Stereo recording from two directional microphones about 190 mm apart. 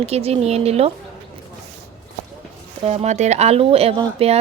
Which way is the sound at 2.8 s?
35° right (ahead or behind).